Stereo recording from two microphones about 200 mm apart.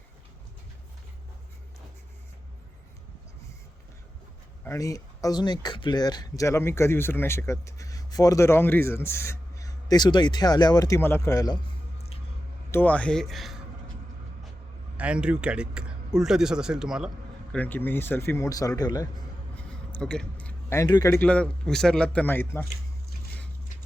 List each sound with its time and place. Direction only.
4.6 s speech: 15° left (ahead or behind)
12.7 s speech: 10° left (ahead or behind)
14.9 s speech: 5° right (ahead or behind)
17.5 s a man's voice: 10° left (ahead or behind)
19.9 s speech: 5° left (ahead or behind)